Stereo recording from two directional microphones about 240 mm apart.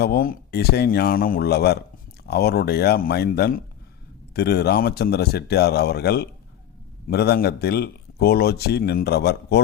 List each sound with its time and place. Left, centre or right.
0.0 s speech: left